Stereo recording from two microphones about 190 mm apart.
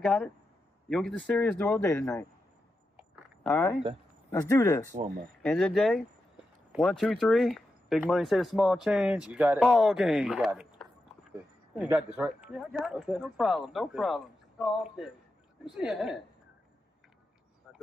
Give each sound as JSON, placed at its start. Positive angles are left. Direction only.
{"t": 0.0, "sound": "a man's voice", "side_deg": 5}
{"t": 3.4, "sound": "speech", "side_deg": 0}
{"t": 4.3, "sound": "a man's voice", "side_deg": 15}
{"t": 5.4, "sound": "speech", "side_deg": 5}
{"t": 12.3, "sound": "speech", "side_deg": -5}